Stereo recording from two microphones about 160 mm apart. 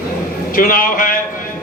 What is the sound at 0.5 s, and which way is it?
Speech, 60° left (ahead or behind).